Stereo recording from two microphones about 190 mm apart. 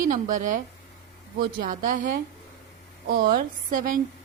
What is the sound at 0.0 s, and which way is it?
Speech, 45° right (ahead or behind).